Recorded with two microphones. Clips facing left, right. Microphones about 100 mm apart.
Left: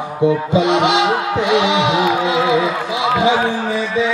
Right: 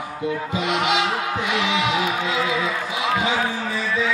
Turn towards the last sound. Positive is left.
turn(degrees=25)  # may be behind; listen again after turning